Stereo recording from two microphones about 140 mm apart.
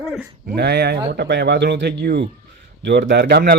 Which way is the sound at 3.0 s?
90° right.